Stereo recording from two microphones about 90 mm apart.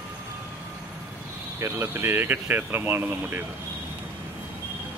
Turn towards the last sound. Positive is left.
turn(degrees=-25)  # may be behind; listen again after turning